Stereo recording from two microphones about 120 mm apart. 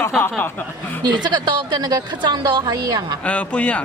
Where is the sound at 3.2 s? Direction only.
10° left (ahead or behind).